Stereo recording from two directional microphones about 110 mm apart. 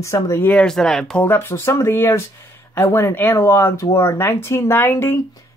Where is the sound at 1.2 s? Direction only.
20° left (ahead or behind).